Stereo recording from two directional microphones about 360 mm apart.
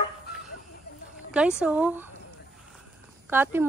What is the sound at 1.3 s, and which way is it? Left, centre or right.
Speech, centre.